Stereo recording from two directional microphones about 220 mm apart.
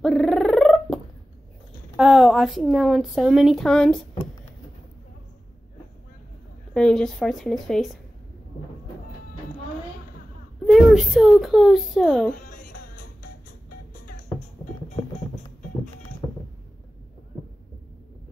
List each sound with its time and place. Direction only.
0.0 s a sound: centre (ahead or behind)
2.0 s a woman's voice: centre (ahead or behind)
6.7 s a woman's voice: 5° left (ahead or behind)
10.7 s a woman's voice: centre (ahead or behind)
12.3 s speech: 40° left (ahead or behind)